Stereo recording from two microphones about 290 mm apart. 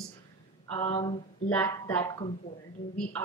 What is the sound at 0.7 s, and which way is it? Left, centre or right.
Speech, centre.